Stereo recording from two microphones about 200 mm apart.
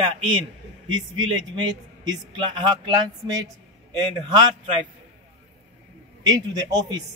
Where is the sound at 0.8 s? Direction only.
75° right (ahead or behind).